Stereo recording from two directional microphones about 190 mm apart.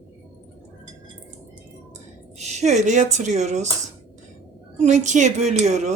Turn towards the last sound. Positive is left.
turn(degrees=-40)  # may be behind; listen again after turning